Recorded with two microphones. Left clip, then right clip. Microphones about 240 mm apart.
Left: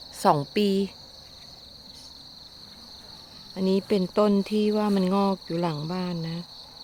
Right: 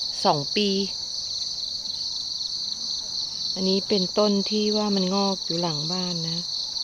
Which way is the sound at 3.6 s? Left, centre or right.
Centre.